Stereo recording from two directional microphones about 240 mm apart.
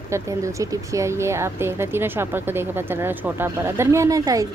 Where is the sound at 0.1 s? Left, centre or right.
Centre.